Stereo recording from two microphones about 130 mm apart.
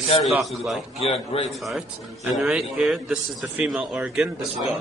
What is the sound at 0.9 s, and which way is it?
Speech, 50° left (ahead or behind).